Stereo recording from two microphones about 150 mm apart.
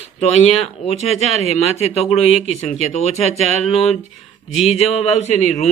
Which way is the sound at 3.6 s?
45° left (ahead or behind).